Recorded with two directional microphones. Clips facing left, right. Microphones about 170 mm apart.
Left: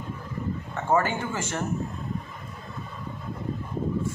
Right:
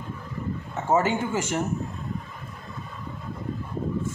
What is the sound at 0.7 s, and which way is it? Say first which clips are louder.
Speech: right 2 dB; 20° right (ahead or behind).